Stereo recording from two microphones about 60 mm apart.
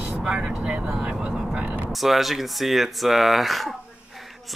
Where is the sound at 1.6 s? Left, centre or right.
Right.